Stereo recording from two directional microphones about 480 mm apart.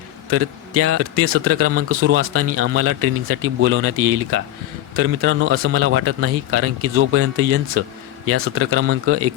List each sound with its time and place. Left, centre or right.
0.3 s speech: right